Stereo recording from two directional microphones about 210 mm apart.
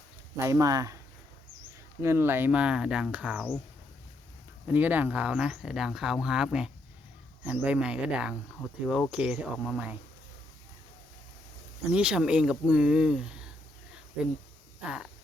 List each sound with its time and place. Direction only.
0.3 s speech: 15° right (ahead or behind)
2.0 s speech: 10° right (ahead or behind)
4.6 s speech: 10° right (ahead or behind)
11.9 s speech: 5° right (ahead or behind)
14.8 s a sound: 5° right (ahead or behind)